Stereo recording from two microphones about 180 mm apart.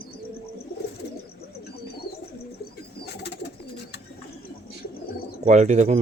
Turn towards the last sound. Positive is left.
turn(degrees=-40)  # may be behind; listen again after turning